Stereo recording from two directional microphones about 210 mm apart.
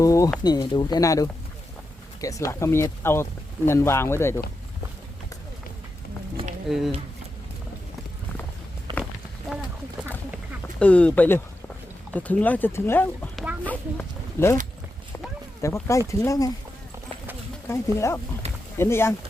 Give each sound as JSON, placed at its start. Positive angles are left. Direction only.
{"t": 0.0, "sound": "a sound", "side_deg": 15}
{"t": 0.4, "sound": "speech", "side_deg": 20}
{"t": 6.7, "sound": "speech", "side_deg": 0}
{"t": 8.9, "sound": "a sound", "side_deg": -20}
{"t": 9.5, "sound": "a sound", "side_deg": -5}
{"t": 10.8, "sound": "speech", "side_deg": 5}
{"t": 13.3, "sound": "a sound", "side_deg": -5}
{"t": 13.7, "sound": "speech", "side_deg": 10}
{"t": 15.6, "sound": "speech", "side_deg": 15}
{"t": 17.7, "sound": "speech", "side_deg": 10}
{"t": 18.4, "sound": "rowboat", "side_deg": -30}
{"t": 18.8, "sound": "speech", "side_deg": 10}